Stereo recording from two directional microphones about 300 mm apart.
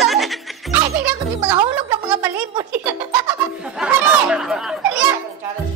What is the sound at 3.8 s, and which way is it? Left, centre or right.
Chatter, centre.